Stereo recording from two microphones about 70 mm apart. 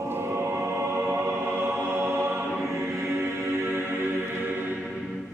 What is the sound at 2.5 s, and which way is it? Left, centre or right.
Choir, centre.